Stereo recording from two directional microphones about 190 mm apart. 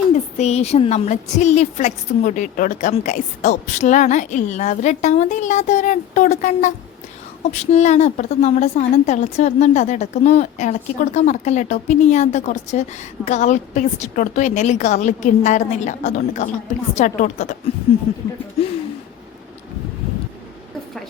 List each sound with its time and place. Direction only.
0.1 s a woman's voice: 35° left (ahead or behind)